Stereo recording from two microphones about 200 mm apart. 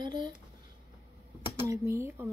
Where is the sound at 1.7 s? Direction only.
15° right (ahead or behind).